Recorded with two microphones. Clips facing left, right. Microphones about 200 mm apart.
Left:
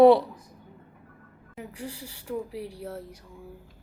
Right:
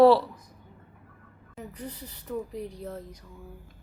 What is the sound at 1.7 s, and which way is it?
A woman's voice, 10° left (ahead or behind).